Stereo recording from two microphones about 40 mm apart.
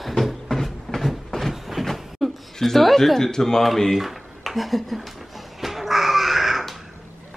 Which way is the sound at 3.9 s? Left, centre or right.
Centre.